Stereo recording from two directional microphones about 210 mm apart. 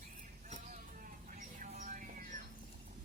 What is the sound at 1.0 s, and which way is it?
Mouse, 40° right (ahead or behind).